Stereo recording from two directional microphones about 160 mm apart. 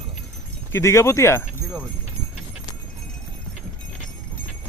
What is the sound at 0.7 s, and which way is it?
Speech, 15° left (ahead or behind).